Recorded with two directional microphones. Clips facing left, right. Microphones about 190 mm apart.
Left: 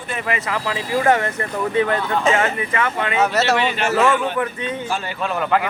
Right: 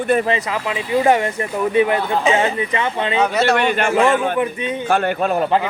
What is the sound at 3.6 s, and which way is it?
Speech, 50° right (ahead or behind).